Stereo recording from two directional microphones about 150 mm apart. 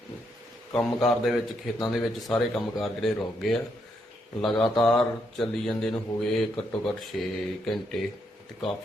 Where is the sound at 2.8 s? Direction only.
Centre (ahead or behind).